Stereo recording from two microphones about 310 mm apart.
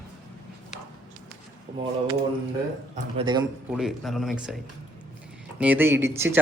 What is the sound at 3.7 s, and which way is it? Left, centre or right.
Speech, centre.